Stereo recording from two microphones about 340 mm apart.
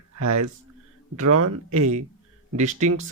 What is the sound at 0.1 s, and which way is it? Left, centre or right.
Speech, right.